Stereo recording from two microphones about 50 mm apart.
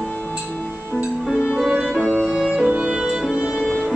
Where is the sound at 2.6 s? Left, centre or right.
Right.